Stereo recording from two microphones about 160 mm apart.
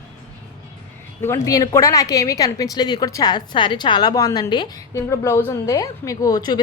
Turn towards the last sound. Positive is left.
turn(degrees=25)  # may be behind; listen again after turning